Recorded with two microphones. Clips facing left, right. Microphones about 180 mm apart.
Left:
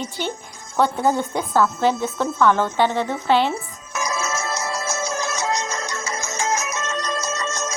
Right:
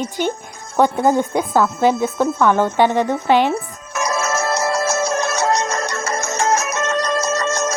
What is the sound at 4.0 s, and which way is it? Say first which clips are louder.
Music: right 5 dB; 65° right (ahead or behind).